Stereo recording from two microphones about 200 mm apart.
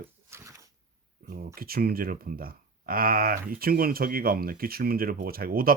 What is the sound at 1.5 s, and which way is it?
Speech, 50° right (ahead or behind).